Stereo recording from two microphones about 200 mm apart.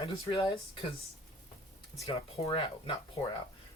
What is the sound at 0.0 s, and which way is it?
Speech, 25° left (ahead or behind).